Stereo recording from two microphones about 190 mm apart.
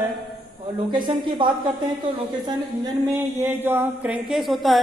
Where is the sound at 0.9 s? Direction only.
25° right (ahead or behind).